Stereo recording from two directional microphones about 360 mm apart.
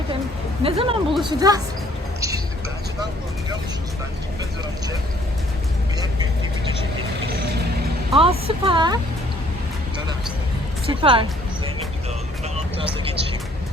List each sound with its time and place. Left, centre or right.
0.6 s a woman's voice: centre
7.3 s vehicle: right
8.1 s a woman's voice: centre
10.8 s a woman's voice: centre
12.5 s vehicle: centre